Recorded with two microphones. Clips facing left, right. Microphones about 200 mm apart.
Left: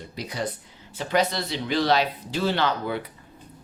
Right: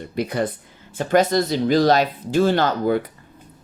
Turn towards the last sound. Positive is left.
turn(degrees=-45)  # may be behind; listen again after turning